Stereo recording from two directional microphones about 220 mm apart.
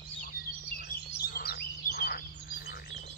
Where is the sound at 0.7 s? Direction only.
45° left (ahead or behind).